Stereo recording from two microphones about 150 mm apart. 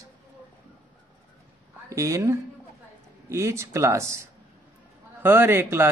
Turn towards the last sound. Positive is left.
turn(degrees=-15)  # may be behind; listen again after turning